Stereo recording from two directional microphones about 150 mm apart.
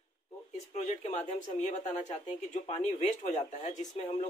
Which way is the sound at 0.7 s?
50° left (ahead or behind).